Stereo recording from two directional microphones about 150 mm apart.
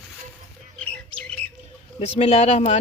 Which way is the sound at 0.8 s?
5° left (ahead or behind).